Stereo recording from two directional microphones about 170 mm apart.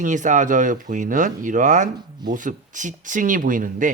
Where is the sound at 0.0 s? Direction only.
45° right (ahead or behind).